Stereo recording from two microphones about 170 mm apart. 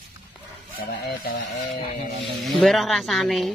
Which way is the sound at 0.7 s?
65° left (ahead or behind).